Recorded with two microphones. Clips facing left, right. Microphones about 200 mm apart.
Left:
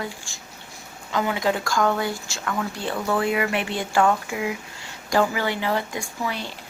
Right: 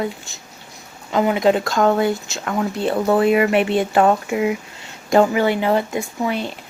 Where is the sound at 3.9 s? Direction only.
30° right (ahead or behind).